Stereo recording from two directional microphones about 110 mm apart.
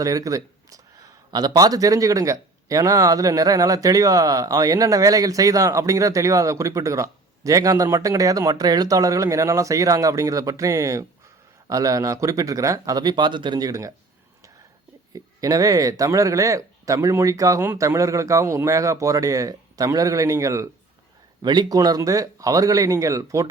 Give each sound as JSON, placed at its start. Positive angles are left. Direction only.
{"t": 0.0, "sound": "speech", "side_deg": -30}
{"t": 15.1, "sound": "speech", "side_deg": -30}
{"t": 21.4, "sound": "speech", "side_deg": -40}